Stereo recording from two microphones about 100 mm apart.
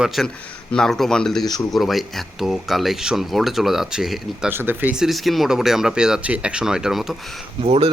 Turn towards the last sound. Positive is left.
turn(degrees=-85)